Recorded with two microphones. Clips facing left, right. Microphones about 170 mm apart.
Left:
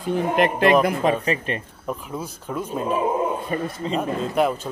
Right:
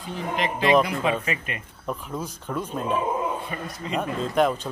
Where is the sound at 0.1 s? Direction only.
55° left (ahead or behind).